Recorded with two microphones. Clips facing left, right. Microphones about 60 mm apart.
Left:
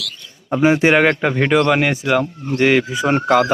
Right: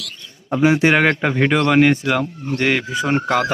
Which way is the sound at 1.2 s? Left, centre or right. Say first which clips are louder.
Left 2 dB; centre.